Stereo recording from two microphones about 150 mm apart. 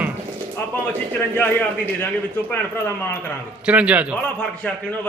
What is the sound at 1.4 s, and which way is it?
Speech, 15° left (ahead or behind).